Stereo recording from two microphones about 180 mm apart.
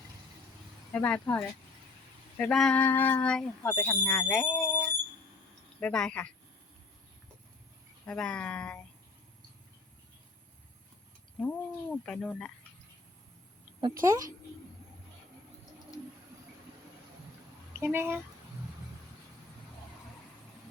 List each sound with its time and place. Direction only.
0.9 s speech: 10° left (ahead or behind)
8.0 s speech: 5° left (ahead or behind)
11.3 s speech: 5° left (ahead or behind)
14.0 s a child's voice: 20° right (ahead or behind)
17.7 s speech: 10° right (ahead or behind)